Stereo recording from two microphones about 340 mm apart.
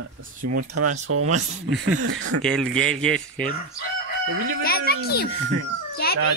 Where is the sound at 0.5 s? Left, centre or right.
Right.